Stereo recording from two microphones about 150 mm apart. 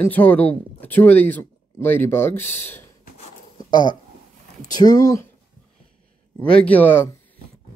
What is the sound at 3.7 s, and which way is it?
Speech, 30° left (ahead or behind).